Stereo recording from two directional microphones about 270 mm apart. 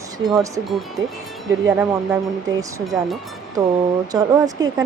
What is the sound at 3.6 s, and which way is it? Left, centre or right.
Speech, centre.